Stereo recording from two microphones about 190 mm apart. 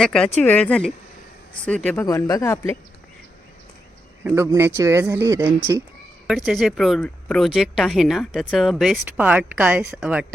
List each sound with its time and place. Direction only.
0.0 s speech: 5° left (ahead or behind)
4.2 s speech: 15° right (ahead or behind)
6.2 s speech: centre (ahead or behind)